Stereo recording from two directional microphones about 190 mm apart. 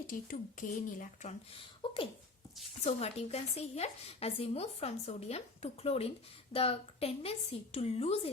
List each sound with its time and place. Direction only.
0.1 s speech: 45° left (ahead or behind)
1.8 s a sound: 25° left (ahead or behind)
2.8 s speech: 35° left (ahead or behind)